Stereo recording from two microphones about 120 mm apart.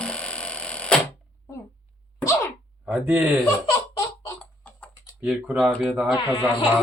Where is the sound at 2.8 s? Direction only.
10° right (ahead or behind).